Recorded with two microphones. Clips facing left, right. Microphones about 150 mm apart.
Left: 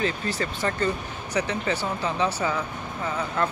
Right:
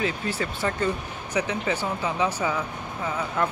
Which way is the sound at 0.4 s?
10° right (ahead or behind).